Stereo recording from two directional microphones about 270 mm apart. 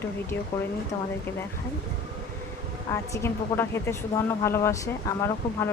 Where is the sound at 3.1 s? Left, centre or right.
Centre.